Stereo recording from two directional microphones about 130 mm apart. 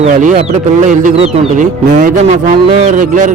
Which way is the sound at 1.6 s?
85° right.